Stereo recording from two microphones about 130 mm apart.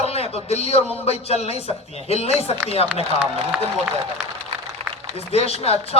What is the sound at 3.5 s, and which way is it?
Speech, 10° right (ahead or behind).